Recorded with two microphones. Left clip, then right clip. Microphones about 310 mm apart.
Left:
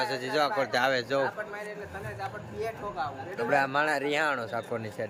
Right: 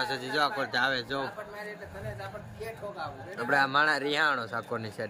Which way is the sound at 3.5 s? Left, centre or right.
Centre.